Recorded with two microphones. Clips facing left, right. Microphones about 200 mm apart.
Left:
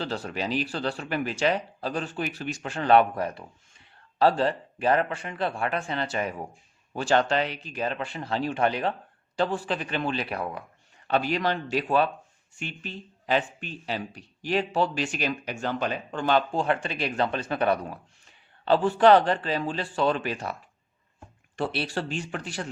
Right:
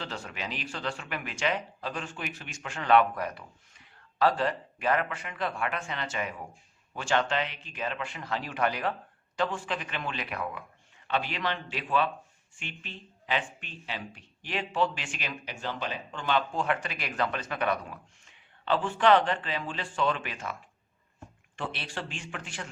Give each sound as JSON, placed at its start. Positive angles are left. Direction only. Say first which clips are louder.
{"t": 0.0, "sound": "speech", "louder": "left 7 dB", "side_deg": 35}